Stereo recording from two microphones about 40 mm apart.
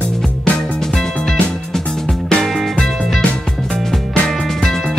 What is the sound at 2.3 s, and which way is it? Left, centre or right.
Music, centre.